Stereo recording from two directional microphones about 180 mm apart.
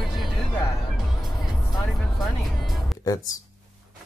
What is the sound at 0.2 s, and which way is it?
Music, centre (ahead or behind).